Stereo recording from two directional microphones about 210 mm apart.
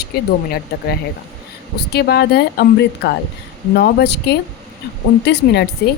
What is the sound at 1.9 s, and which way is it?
A woman's voice, 50° left (ahead or behind).